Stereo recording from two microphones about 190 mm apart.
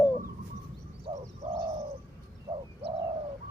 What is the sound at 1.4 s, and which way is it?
Bird, 35° right (ahead or behind).